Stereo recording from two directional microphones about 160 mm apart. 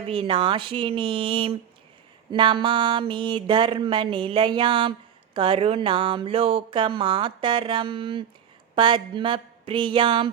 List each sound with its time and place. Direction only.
0.1 s speech: 35° right (ahead or behind)